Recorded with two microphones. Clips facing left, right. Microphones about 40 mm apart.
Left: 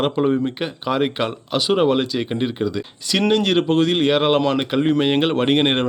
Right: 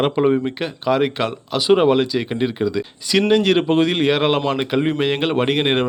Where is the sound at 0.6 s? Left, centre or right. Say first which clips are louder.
Right 2 dB; centre.